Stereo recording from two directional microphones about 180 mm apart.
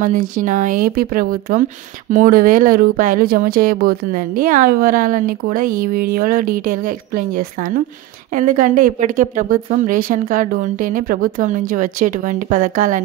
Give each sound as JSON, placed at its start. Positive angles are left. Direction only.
{"t": 0.0, "sound": "speech", "side_deg": -45}